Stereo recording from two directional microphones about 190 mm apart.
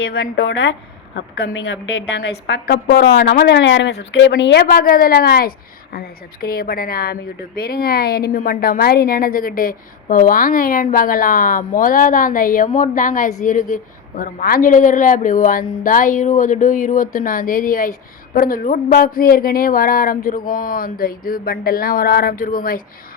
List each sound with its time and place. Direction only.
0.0 s a woman's voice: 60° left (ahead or behind)